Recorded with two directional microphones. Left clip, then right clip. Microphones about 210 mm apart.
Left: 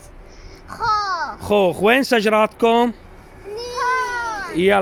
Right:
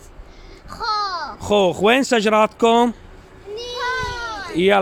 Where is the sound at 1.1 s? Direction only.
Centre (ahead or behind).